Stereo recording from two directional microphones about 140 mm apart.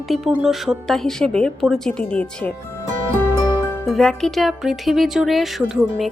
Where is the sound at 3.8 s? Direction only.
5° left (ahead or behind).